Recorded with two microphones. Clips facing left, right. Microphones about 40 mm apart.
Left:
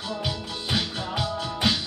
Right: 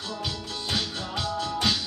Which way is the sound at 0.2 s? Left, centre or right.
Centre.